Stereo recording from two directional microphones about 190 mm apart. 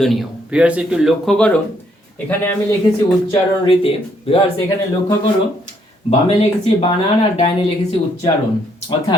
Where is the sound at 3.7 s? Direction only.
30° left (ahead or behind).